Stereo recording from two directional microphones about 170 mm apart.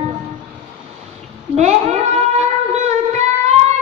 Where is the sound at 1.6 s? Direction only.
40° right (ahead or behind).